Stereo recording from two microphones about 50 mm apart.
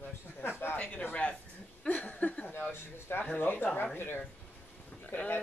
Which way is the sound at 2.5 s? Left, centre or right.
Left.